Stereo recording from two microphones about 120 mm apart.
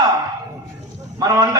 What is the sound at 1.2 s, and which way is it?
Speech, 30° right (ahead or behind).